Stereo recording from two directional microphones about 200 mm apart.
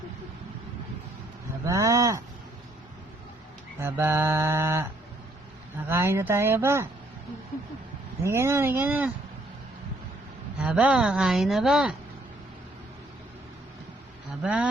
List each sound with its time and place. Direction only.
1.6 s mantra: 15° right (ahead or behind)
3.8 s mantra: 10° right (ahead or behind)
5.9 s mantra: 10° right (ahead or behind)
8.2 s mantra: 15° right (ahead or behind)
10.6 s speech: 5° right (ahead or behind)
14.4 s mantra: 5° right (ahead or behind)